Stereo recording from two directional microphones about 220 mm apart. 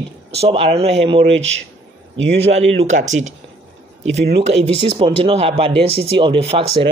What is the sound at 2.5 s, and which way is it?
Speech, 30° right (ahead or behind).